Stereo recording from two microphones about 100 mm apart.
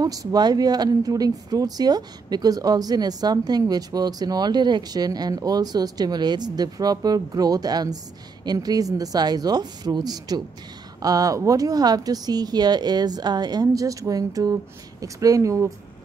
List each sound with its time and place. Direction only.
0.0 s speech: 40° right (ahead or behind)